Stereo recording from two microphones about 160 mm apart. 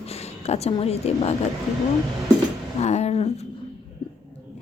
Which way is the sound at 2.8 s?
45° left (ahead or behind).